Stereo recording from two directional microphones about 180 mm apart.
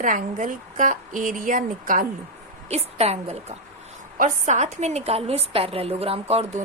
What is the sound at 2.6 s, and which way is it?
A woman's voice, 35° right (ahead or behind).